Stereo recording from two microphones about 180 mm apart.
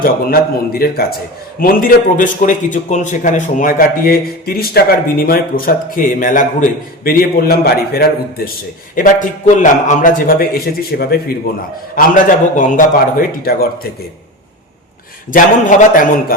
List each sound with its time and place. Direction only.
0.0 s a man's voice: 55° left (ahead or behind)
9.0 s a man's voice: 45° left (ahead or behind)
11.9 s a man's voice: 50° left (ahead or behind)
15.3 s a man's voice: 45° left (ahead or behind)